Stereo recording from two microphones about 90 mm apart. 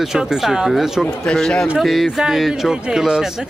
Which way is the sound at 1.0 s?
5° left (ahead or behind).